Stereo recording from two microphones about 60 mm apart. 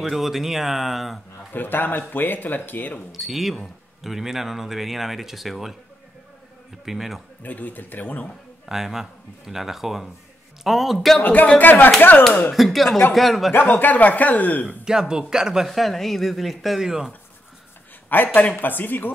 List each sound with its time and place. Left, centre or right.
0.0 s speech: centre
1.5 s speech: left
3.1 s speech: centre
6.9 s speech: centre
7.4 s speech: left
8.6 s a man's voice: centre
11.2 s speech: left
12.5 s speech: centre
13.7 s speech: left
14.9 s speech: centre
18.1 s speech: left